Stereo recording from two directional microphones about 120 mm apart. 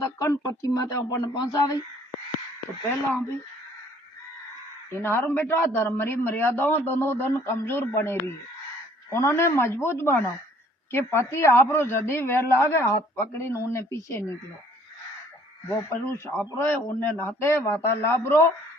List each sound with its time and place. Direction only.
0.0 s a man's voice: 25° left (ahead or behind)
3.1 s speech: 15° left (ahead or behind)
4.9 s a man's voice: 20° left (ahead or behind)
15.9 s a man's voice: 20° left (ahead or behind)